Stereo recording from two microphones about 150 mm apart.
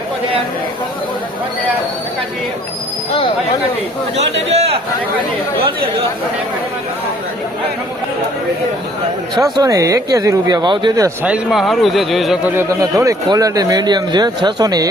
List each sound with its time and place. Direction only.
4.2 s a man's voice: 45° right (ahead or behind)
9.3 s speech: 25° right (ahead or behind)
11.2 s speech: 5° right (ahead or behind)
12.5 s speech: 20° right (ahead or behind)